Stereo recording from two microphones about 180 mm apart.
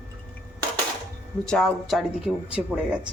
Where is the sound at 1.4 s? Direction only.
5° left (ahead or behind).